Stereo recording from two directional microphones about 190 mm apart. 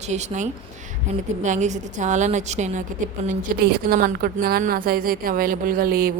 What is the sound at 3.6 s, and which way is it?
A woman's voice, 55° right (ahead or behind).